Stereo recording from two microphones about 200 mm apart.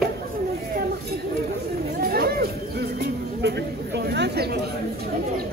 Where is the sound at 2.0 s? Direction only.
50° right (ahead or behind).